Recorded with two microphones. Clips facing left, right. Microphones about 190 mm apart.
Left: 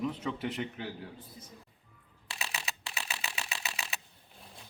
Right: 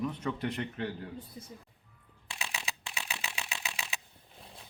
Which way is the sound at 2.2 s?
5° left (ahead or behind).